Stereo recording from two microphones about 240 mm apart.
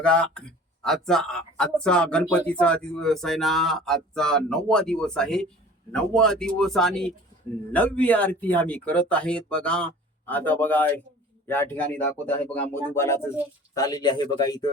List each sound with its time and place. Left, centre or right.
0.0 s speech: centre